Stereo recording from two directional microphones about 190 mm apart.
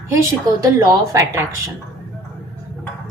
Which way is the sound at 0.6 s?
15° right (ahead or behind).